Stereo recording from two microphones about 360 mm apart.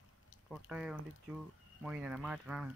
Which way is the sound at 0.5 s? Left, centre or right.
Centre.